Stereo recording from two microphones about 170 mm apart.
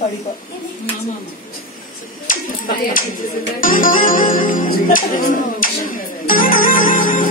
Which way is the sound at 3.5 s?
55° left (ahead or behind).